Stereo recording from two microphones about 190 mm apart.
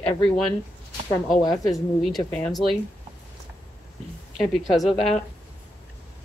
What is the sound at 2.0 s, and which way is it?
Speech, 5° left (ahead or behind).